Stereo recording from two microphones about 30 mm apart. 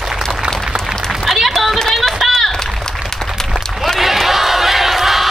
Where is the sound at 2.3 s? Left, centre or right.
Centre.